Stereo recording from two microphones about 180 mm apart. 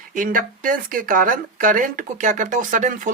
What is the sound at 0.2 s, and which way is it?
Speech, 50° right (ahead or behind).